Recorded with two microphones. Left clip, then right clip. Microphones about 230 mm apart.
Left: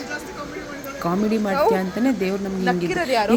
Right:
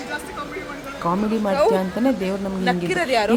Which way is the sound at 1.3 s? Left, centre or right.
Centre.